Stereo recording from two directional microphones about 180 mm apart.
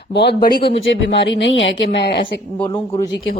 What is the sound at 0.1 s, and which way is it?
Speech, 65° left (ahead or behind).